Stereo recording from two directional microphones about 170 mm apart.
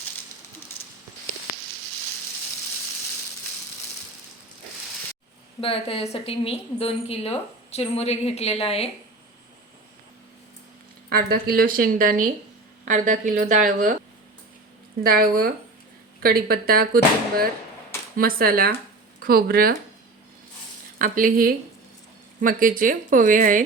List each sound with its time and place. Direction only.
0.8 s a sound: 35° left (ahead or behind)
5.5 s a woman's voice: 35° left (ahead or behind)
11.1 s a woman's voice: 60° right (ahead or behind)
15.0 s a woman's voice: 60° right (ahead or behind)
21.0 s a woman's voice: 55° right (ahead or behind)